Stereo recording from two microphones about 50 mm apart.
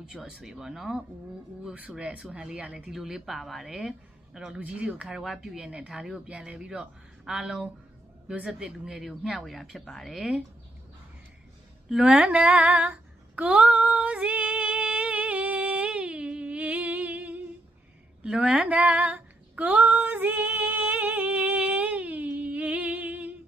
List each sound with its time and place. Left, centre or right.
0.3 s speech: centre
2.0 s speech: right
2.9 s speech: centre
4.6 s speech: right
5.0 s speech: centre
5.7 s speech: centre
6.2 s speech: right
8.8 s speech: centre
12.0 s female singing: right
14.1 s music: right
18.2 s speech: right
19.7 s female singing: right